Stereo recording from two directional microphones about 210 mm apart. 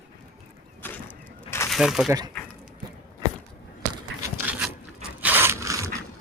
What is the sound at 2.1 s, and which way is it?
Speech, 20° right (ahead or behind).